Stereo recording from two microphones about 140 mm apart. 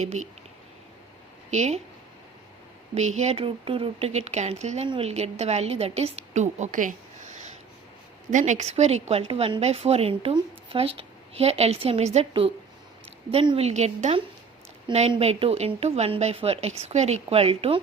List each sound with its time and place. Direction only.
0.0 s speech: 55° right (ahead or behind)
1.5 s a woman's voice: 55° right (ahead or behind)
2.9 s a woman's voice: 55° right (ahead or behind)
13.3 s a woman's voice: 40° right (ahead or behind)
13.7 s a woman's voice: 50° right (ahead or behind)
14.9 s a woman's voice: 35° right (ahead or behind)
15.2 s a woman's voice: 45° right (ahead or behind)